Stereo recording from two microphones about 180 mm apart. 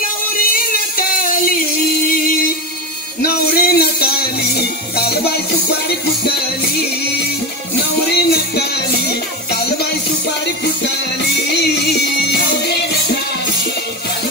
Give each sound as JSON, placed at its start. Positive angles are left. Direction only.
{"t": 0.5, "sound": "music", "side_deg": 55}
{"t": 3.2, "sound": "music", "side_deg": 55}
{"t": 8.1, "sound": "music", "side_deg": 65}
{"t": 11.3, "sound": "music", "side_deg": 65}